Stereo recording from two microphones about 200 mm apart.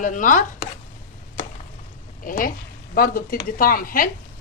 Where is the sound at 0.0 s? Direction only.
40° left (ahead or behind).